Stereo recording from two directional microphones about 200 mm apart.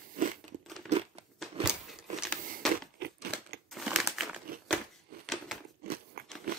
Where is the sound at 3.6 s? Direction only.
Centre (ahead or behind).